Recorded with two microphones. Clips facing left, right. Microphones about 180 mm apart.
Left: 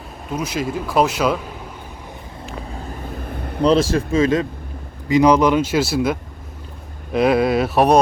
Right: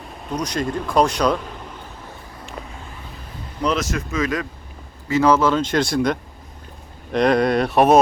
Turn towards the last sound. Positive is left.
turn(degrees=0)  # may be behind; listen again after turning